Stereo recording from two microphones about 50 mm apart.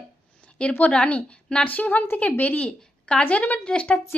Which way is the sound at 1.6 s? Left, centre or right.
Left.